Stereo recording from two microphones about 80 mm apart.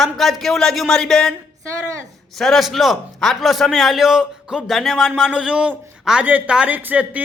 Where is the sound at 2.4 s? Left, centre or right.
Centre.